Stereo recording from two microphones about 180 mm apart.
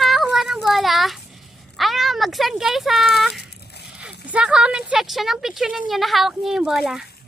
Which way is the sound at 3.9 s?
5° right (ahead or behind).